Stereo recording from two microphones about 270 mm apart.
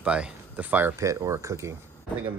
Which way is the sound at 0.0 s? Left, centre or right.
Centre.